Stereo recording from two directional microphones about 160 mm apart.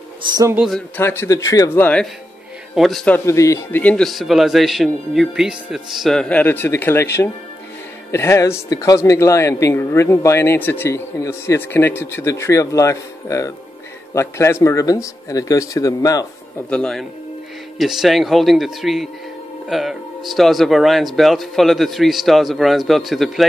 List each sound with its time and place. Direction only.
0.3 s speech: 20° right (ahead or behind)
0.6 s speech: centre (ahead or behind)
0.9 s speech: 15° left (ahead or behind)
2.7 s speech: centre (ahead or behind)
3.3 s speech: 20° left (ahead or behind)
16.7 s speech: 5° left (ahead or behind)